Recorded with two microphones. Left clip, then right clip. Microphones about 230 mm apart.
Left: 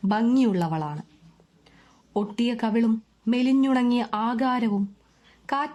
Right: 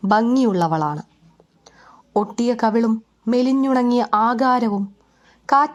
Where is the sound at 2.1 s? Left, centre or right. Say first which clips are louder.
Right 7 dB; centre.